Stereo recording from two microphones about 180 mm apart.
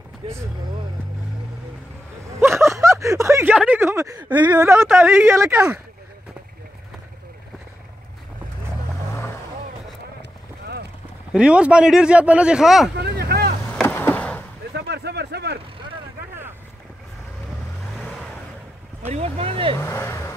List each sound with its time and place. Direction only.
0.2 s speech: 35° right (ahead or behind)
2.4 s speech: 15° right (ahead or behind)
11.3 s speech: 5° right (ahead or behind)
12.9 s vehicle: 60° right (ahead or behind)
13.7 s a sound: 10° left (ahead or behind)
14.7 s a sound: 65° right (ahead or behind)
17.9 s vehicle: centre (ahead or behind)
19.0 s speech: 35° right (ahead or behind)
19.8 s speech: 15° left (ahead or behind)